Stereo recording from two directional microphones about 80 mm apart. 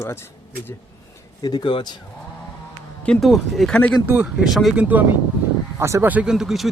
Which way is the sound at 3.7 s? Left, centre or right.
Centre.